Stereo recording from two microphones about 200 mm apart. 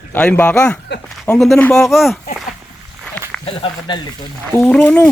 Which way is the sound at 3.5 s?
25° left (ahead or behind).